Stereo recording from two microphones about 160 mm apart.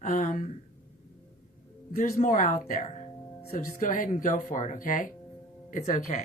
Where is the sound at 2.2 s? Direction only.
55° left (ahead or behind).